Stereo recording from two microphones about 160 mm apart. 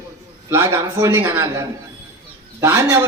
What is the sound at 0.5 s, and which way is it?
A man's voice, 15° right (ahead or behind).